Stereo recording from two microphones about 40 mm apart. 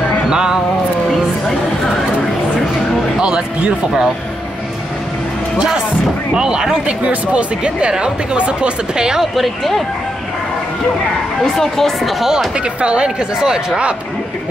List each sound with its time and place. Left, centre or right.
0.3 s music: right
3.2 s speech: right
6.3 s speech: centre
9.2 s speech: centre
11.5 s speech: centre
12.2 s speech: centre
12.5 s speech: right